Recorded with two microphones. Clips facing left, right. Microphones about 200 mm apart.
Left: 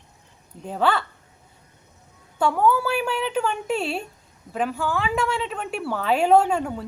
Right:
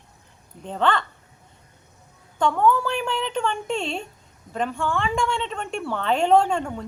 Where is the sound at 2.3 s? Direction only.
5° left (ahead or behind).